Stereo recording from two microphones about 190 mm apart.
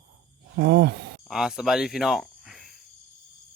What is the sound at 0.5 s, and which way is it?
Speech, 65° right (ahead or behind).